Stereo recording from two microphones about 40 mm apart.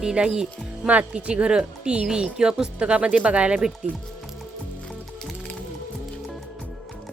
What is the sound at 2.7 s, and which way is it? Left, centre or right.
Speech, right.